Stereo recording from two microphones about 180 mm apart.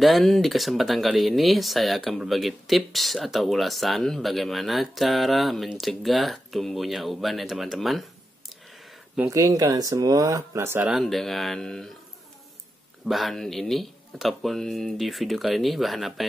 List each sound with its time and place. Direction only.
0.0 s speech: centre (ahead or behind)
9.3 s speech: 20° right (ahead or behind)
10.9 s speech: centre (ahead or behind)
13.0 s speech: centre (ahead or behind)